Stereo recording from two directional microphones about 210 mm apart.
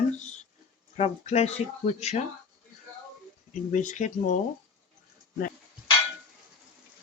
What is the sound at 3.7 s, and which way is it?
Speech, 35° left (ahead or behind).